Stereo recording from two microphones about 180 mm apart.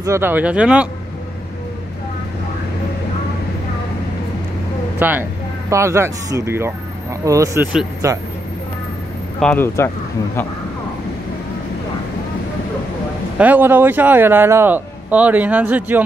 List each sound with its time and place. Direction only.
0.0 s speech: 15° right (ahead or behind)
4.9 s speech: 10° right (ahead or behind)
9.4 s speech: 10° left (ahead or behind)
13.4 s speech: 10° right (ahead or behind)